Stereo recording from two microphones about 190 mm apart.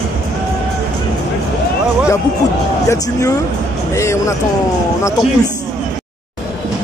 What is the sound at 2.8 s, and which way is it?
Speech, 15° left (ahead or behind).